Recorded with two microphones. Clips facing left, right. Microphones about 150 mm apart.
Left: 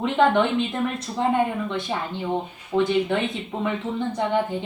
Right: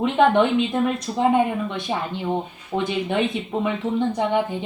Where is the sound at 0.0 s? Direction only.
15° right (ahead or behind).